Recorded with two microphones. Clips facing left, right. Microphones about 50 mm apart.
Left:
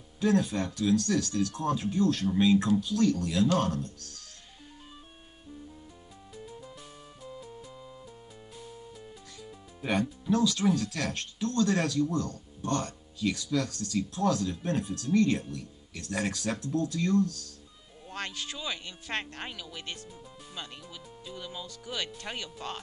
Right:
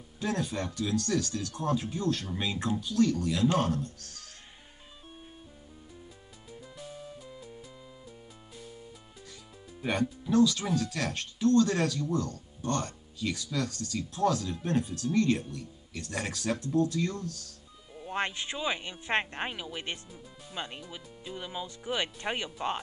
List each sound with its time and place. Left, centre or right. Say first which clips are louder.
0.2 s speech: left 5 dB; centre
6.8 s music: right 4 dB; centre
9.8 s speech: even; centre
18.0 s speech: right 5 dB; right